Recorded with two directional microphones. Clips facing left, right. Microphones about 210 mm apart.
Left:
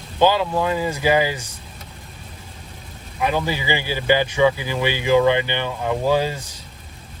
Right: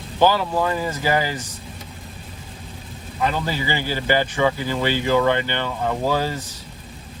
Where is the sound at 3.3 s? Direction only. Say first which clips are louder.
Left 2 dB; 15° left (ahead or behind).